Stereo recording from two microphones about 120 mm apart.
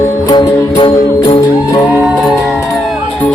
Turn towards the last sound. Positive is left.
turn(degrees=45)  # may be behind; listen again after turning